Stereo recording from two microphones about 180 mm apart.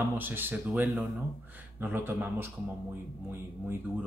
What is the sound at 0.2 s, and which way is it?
Speech, 10° right (ahead or behind).